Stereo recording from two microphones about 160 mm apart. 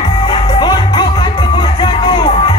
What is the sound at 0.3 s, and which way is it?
Music, 25° left (ahead or behind).